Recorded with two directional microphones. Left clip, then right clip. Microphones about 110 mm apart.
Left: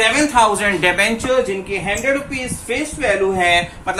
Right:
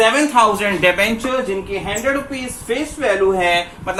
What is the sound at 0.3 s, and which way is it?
Speech, 20° right (ahead or behind).